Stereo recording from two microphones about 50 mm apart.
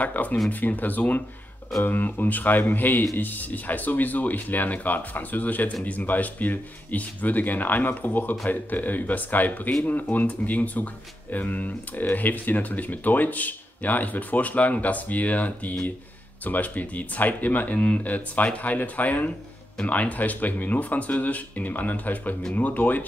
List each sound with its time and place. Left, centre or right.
0.0 s speech: left